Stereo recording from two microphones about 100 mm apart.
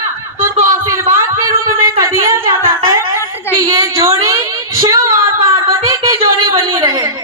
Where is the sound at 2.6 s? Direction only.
30° right (ahead or behind).